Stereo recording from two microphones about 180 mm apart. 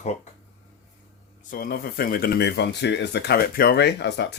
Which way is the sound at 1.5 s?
55° left (ahead or behind).